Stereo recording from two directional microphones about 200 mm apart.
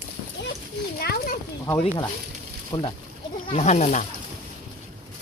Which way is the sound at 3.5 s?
30° left (ahead or behind).